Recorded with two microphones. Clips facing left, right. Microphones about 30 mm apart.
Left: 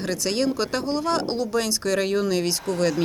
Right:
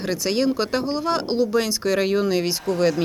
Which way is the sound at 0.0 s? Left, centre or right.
Centre.